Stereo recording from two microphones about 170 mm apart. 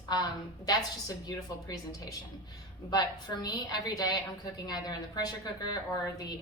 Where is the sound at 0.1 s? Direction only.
25° left (ahead or behind).